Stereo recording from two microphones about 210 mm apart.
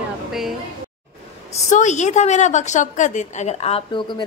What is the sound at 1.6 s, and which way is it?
A woman's voice, 35° left (ahead or behind).